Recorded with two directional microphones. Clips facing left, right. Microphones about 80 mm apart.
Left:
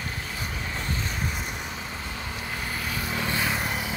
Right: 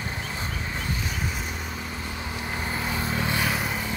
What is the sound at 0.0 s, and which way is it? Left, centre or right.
Horse, centre.